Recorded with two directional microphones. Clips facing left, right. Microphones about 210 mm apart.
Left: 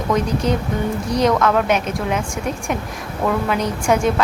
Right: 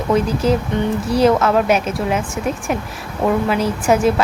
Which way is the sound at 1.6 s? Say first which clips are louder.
Right 2 dB; 5° right (ahead or behind).